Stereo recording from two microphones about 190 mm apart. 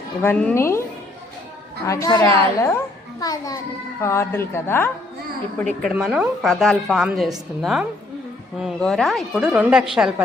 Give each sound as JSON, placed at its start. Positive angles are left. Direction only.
{"t": 0.2, "sound": "a child's voice", "side_deg": 10}
{"t": 1.9, "sound": "a child's voice", "side_deg": 20}